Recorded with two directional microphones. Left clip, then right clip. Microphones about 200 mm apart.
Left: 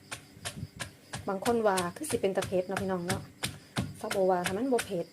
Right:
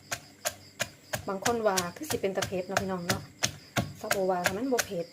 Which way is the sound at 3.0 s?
10° right (ahead or behind).